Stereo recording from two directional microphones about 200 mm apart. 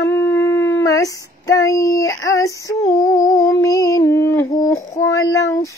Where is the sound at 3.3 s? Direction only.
15° left (ahead or behind).